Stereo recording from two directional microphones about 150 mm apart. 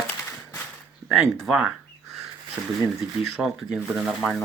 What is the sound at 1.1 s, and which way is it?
Speech, 5° right (ahead or behind).